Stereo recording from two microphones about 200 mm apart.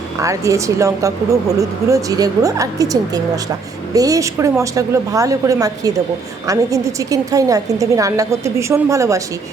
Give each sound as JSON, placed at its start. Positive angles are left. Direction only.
{"t": 0.2, "sound": "speech", "side_deg": -15}